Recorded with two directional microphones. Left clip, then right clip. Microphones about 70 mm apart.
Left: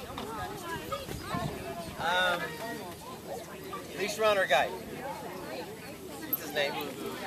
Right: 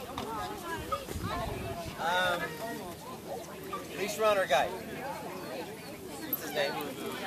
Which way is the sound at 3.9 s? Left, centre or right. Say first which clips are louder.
Left 1 dB; left.